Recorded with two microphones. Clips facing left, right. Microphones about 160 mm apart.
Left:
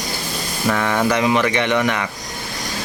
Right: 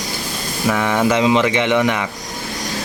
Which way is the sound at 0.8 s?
15° right (ahead or behind).